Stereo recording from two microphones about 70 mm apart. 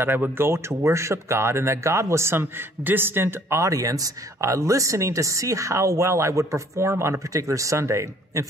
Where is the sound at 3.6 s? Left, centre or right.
Right.